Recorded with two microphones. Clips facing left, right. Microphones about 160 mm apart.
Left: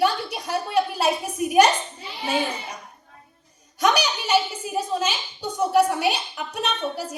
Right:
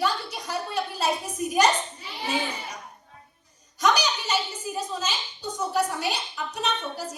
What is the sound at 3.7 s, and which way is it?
A woman's voice, 60° left (ahead or behind).